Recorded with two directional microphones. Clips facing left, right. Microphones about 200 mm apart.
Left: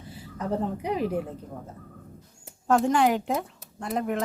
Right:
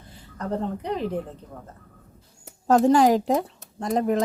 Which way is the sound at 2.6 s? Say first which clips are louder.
Right 5 dB; 35° right (ahead or behind).